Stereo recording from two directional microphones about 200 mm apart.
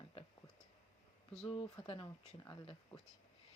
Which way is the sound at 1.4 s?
25° left (ahead or behind).